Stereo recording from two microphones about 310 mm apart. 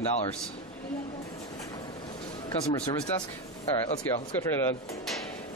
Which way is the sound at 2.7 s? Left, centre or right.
Centre.